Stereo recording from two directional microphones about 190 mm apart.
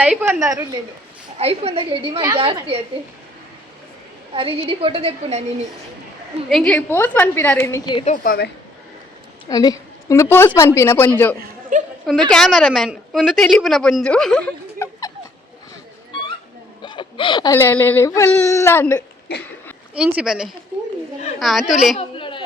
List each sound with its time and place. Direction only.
0.0 s a woman's voice: 5° right (ahead or behind)
0.3 s a woman's voice: 15° right (ahead or behind)
1.4 s a woman's voice: 30° right (ahead or behind)
4.4 s a woman's voice: 30° right (ahead or behind)
6.5 s a woman's voice: 5° left (ahead or behind)
7.9 s a woman's voice: 40° left (ahead or behind)
9.5 s a woman's voice: 20° left (ahead or behind)
11.7 s a woman's voice: 40° right (ahead or behind)
12.3 s a woman's voice: centre (ahead or behind)
16.8 s speech: 25° left (ahead or behind)
19.9 s a woman's voice: 5° right (ahead or behind)
21.9 s speech: 25° left (ahead or behind)